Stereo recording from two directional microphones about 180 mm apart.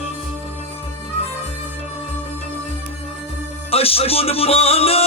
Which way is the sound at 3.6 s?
35° left (ahead or behind).